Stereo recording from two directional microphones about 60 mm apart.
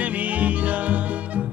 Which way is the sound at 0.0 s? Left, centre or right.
Right.